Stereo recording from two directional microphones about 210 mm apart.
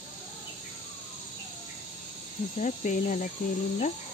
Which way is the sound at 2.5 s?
35° left (ahead or behind).